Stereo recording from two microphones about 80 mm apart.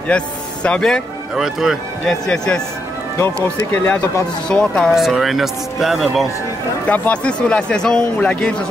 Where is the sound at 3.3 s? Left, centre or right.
Centre.